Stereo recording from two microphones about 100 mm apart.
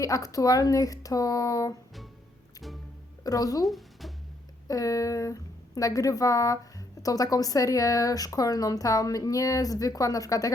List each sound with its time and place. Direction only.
0.0 s a woman's voice: 35° left (ahead or behind)
3.2 s a woman's voice: 35° left (ahead or behind)
3.7 s a sound: centre (ahead or behind)
4.7 s a woman's voice: 35° left (ahead or behind)